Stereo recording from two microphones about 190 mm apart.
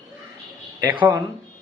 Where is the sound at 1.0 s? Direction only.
15° right (ahead or behind).